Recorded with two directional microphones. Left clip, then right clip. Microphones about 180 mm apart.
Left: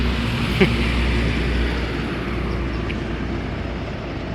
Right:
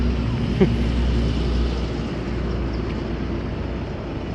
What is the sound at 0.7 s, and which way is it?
Vehicle, 25° left (ahead or behind).